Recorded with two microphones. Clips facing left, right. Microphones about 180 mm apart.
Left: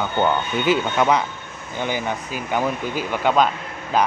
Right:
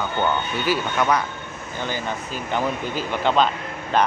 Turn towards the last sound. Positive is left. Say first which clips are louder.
# even
turn(degrees=5)  # may be behind; listen again after turning